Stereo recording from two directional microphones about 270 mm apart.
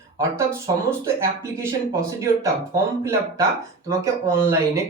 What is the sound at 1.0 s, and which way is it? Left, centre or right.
Speech, centre.